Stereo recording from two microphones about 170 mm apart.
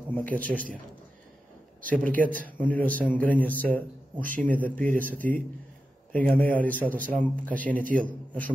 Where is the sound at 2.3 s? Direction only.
10° left (ahead or behind).